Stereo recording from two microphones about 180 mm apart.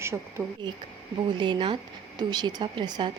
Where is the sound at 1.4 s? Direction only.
25° right (ahead or behind).